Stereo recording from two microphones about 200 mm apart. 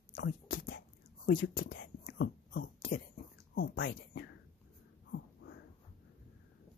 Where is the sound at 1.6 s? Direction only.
65° left (ahead or behind).